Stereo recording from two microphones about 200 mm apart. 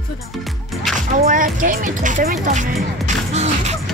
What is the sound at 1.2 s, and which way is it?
Speech, 40° right (ahead or behind).